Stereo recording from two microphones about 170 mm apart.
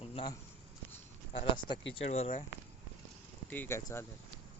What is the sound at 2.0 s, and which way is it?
Speech, 40° left (ahead or behind).